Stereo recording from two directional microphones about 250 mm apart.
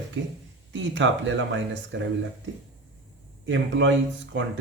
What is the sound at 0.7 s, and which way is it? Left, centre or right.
Speech, right.